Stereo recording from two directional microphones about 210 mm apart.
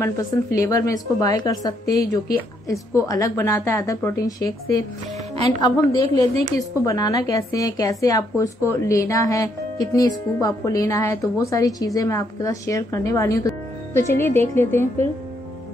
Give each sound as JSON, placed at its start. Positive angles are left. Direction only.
{"t": 0.0, "sound": "a woman's voice", "side_deg": 15}